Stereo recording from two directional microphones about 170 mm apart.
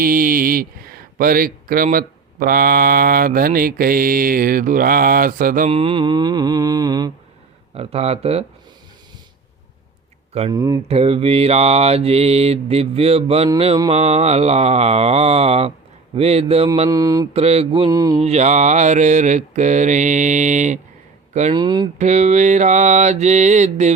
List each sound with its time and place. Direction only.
0.0 s speech: 55° right (ahead or behind)
5.7 s mantra: 30° right (ahead or behind)
7.7 s mantra: 35° right (ahead or behind)
10.5 s mantra: 20° right (ahead or behind)
10.8 s mantra: 35° right (ahead or behind)
16.9 s mantra: 20° right (ahead or behind)
17.3 s mantra: 40° right (ahead or behind)
17.9 s mantra: 20° right (ahead or behind)
18.2 s mantra: 40° right (ahead or behind)
21.5 s mantra: 25° right (ahead or behind)
21.9 s mantra: 45° right (ahead or behind)